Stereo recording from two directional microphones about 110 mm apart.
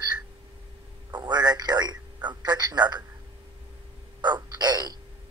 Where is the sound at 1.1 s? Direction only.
40° right (ahead or behind).